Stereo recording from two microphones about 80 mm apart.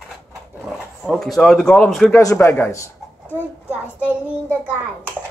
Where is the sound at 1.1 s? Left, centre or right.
Centre.